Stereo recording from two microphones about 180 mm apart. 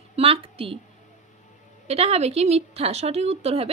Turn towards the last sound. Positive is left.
turn(degrees=-35)  # may be behind; listen again after turning